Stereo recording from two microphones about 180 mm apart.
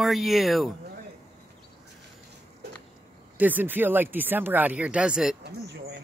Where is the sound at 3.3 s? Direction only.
10° right (ahead or behind).